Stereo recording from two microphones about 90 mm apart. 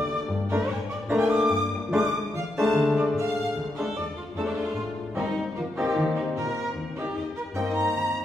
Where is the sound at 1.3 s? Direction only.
Centre (ahead or behind).